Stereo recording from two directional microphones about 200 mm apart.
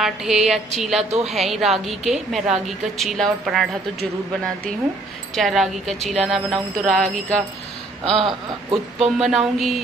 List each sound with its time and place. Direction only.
0.0 s speech: centre (ahead or behind)
5.3 s speech: centre (ahead or behind)
8.0 s a sound: 25° right (ahead or behind)
9.0 s speech: centre (ahead or behind)